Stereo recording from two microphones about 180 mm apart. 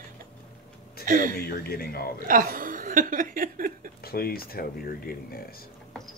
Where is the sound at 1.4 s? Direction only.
60° left (ahead or behind).